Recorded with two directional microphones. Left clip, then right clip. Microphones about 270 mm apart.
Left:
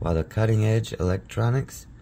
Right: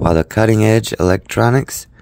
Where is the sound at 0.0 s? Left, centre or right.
Right.